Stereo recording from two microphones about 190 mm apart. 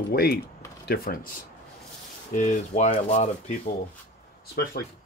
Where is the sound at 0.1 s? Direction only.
55° left (ahead or behind).